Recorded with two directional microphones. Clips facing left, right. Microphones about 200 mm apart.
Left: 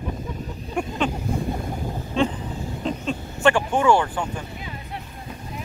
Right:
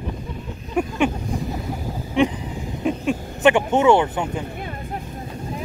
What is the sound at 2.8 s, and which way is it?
Speech, 15° right (ahead or behind).